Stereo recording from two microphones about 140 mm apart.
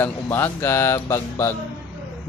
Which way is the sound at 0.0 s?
15° left (ahead or behind).